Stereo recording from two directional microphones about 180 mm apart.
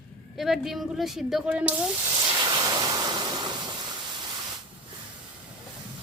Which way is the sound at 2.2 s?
20° right (ahead or behind).